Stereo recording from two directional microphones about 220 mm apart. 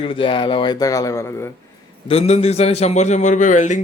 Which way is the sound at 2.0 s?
30° left (ahead or behind).